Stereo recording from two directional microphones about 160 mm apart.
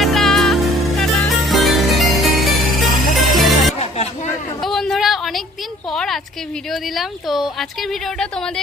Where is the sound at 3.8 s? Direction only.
40° left (ahead or behind).